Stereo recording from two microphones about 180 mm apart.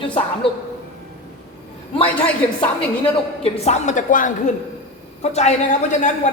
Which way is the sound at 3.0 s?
35° left (ahead or behind).